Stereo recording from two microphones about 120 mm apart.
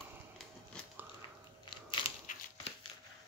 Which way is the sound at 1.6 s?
45° left (ahead or behind).